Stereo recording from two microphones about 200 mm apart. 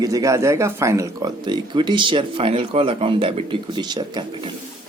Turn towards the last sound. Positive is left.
turn(degrees=-20)  # may be behind; listen again after turning